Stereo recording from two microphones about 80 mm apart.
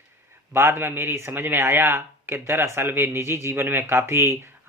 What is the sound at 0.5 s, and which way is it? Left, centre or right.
Speech, right.